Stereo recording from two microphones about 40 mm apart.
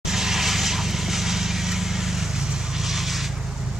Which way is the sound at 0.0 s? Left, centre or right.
Centre.